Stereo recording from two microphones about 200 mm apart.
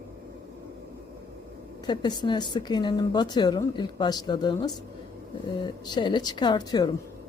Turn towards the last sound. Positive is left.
turn(degrees=20)  # may be behind; listen again after turning